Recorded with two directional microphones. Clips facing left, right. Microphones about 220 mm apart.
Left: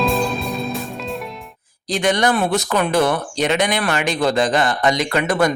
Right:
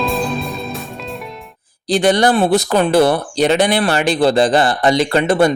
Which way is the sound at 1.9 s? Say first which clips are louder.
Right 5 dB; 35° right (ahead or behind).